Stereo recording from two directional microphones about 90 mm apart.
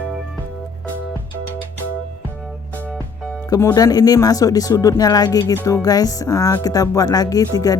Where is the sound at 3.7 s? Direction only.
45° left (ahead or behind).